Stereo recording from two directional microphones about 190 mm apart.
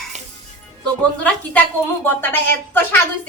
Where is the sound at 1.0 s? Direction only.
5° left (ahead or behind).